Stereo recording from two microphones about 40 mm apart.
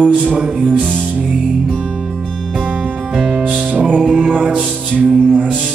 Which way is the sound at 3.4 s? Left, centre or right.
Right.